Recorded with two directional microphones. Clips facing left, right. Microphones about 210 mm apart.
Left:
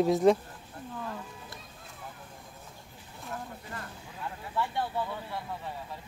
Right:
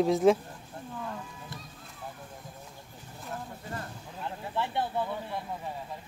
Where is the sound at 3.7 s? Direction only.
25° right (ahead or behind).